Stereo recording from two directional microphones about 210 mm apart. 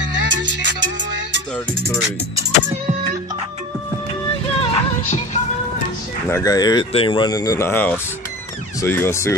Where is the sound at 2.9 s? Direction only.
35° right (ahead or behind).